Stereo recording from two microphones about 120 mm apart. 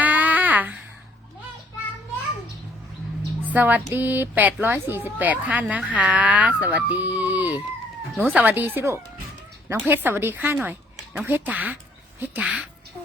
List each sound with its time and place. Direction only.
0.0 s a sound: 15° right (ahead or behind)
3.5 s speech: 15° right (ahead or behind)
8.1 s speech: centre (ahead or behind)
8.4 s speech: 15° right (ahead or behind)